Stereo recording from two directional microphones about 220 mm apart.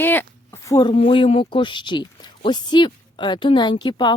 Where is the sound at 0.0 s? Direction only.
10° left (ahead or behind).